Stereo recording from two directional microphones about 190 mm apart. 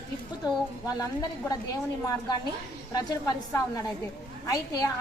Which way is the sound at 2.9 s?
20° left (ahead or behind).